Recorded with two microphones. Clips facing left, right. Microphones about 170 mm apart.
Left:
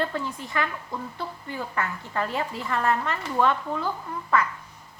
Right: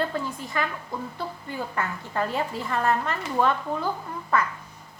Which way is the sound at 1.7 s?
35° right (ahead or behind).